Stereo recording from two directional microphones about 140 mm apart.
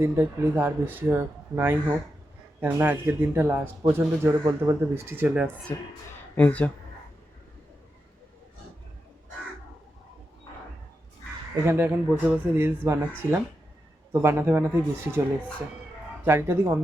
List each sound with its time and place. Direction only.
0.0 s speech: 15° right (ahead or behind)
5.7 s speech: 25° left (ahead or behind)
6.3 s speech: 10° left (ahead or behind)
11.6 s speech: 15° right (ahead or behind)
14.1 s speech: 15° right (ahead or behind)
16.2 s speech: 15° right (ahead or behind)